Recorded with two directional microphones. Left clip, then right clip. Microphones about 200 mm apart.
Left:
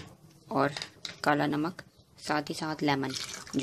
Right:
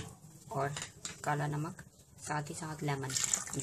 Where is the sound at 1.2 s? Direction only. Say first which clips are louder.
Left 9 dB; 45° left (ahead or behind).